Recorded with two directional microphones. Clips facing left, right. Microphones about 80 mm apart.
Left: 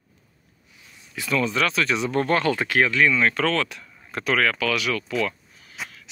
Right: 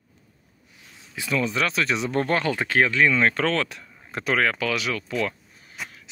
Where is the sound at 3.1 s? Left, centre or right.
Right.